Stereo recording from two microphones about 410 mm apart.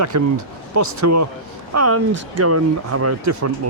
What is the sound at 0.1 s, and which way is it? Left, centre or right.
Speech, right.